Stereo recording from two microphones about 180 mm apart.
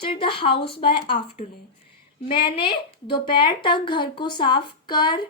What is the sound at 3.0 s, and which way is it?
A woman's voice, 25° left (ahead or behind).